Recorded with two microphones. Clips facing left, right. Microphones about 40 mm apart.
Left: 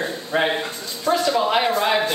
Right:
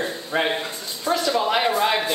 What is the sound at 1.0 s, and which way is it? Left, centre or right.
Speech, centre.